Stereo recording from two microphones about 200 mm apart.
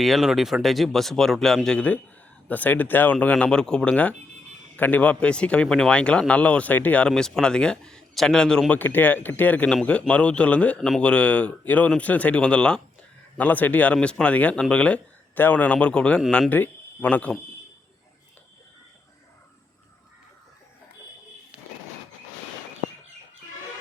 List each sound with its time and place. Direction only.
0.0 s speech: centre (ahead or behind)